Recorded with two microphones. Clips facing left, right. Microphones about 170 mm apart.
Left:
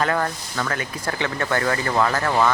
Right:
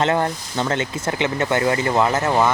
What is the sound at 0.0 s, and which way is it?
Speech, 25° right (ahead or behind).